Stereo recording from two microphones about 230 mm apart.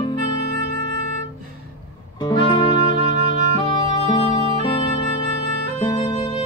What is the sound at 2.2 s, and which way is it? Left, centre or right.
Music, left.